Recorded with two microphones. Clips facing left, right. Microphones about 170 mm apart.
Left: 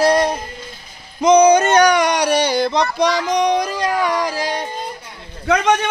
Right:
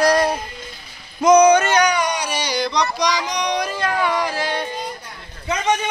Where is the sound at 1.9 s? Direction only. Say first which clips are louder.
Left 6 dB; 75° left (ahead or behind); by 3.5 s 50° left (ahead or behind).